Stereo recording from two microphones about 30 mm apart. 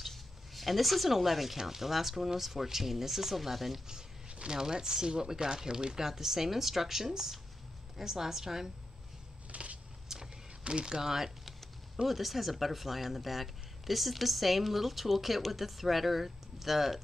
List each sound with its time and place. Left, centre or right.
0.0 s a sound: centre
1.6 s speech: centre
4.5 s speech: right
6.0 s speech: centre
9.5 s a sound: right
10.1 s vehicle: centre
10.6 s speech: right
10.9 s speech: centre